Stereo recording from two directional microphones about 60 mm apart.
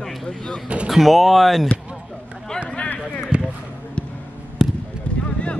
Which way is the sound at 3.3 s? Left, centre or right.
Centre.